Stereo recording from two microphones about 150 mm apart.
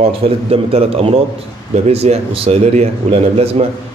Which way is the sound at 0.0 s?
40° right (ahead or behind).